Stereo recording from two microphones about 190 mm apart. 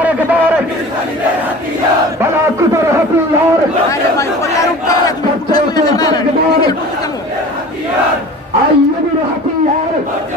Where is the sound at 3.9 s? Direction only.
15° left (ahead or behind).